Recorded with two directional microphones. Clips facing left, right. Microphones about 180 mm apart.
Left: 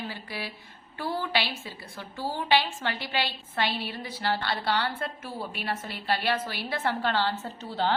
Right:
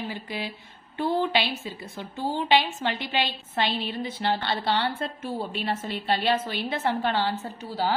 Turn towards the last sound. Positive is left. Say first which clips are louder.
# right 1 dB
turn(degrees=-10)  # may be behind; listen again after turning